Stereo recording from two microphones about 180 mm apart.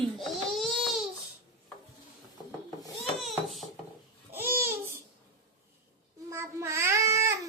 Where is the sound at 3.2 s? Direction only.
Centre (ahead or behind).